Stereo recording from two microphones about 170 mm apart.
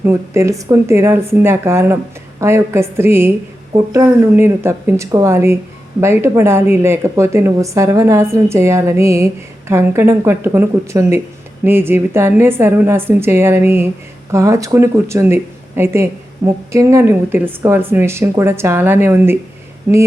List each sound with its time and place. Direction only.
0.0 s speech: 15° right (ahead or behind)